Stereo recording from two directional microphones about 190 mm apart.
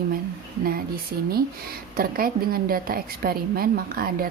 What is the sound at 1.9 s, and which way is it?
Speech, 50° right (ahead or behind).